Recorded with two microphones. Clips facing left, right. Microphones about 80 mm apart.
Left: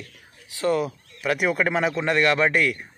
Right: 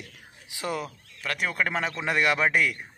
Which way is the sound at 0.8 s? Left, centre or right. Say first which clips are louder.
Left 8 dB; centre.